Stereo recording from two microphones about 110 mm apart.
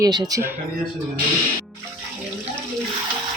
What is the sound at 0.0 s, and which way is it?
Speech, 35° right (ahead or behind).